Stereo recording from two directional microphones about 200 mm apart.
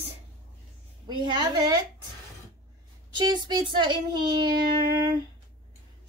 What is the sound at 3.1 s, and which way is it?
Speech, 20° right (ahead or behind).